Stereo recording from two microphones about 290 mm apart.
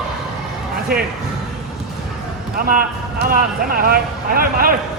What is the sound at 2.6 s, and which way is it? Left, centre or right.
Speech, right.